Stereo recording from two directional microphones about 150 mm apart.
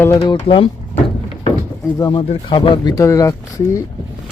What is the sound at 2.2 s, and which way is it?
Speech, 35° left (ahead or behind).